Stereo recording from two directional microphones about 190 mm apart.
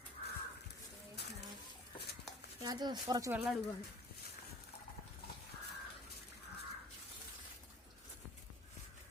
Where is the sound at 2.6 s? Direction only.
20° right (ahead or behind).